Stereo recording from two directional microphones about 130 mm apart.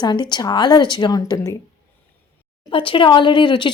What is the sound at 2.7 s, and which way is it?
A woman's voice, 40° left (ahead or behind).